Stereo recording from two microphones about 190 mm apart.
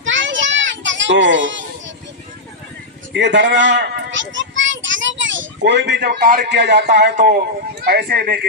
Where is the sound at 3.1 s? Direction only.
70° right (ahead or behind).